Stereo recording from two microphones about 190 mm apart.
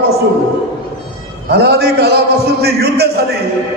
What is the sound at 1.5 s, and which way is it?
A man's voice, 60° right (ahead or behind).